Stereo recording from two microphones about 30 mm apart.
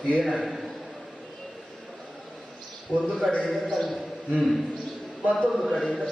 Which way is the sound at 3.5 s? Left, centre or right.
Centre.